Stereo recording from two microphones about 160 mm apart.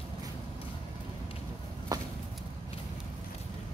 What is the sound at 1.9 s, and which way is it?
Chop, 25° right (ahead or behind).